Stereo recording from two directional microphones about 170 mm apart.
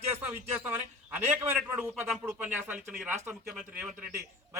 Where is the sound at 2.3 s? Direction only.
10° right (ahead or behind).